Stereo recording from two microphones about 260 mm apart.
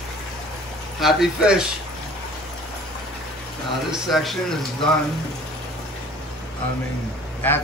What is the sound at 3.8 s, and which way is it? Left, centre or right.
Speech, centre.